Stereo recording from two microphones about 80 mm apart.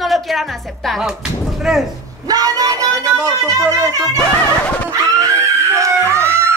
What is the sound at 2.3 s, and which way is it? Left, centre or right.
Speech, right.